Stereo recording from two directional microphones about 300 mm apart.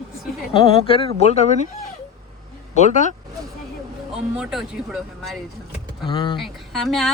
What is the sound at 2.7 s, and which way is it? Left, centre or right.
Speech, left.